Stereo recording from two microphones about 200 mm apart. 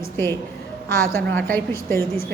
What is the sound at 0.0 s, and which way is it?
Speech, 15° left (ahead or behind).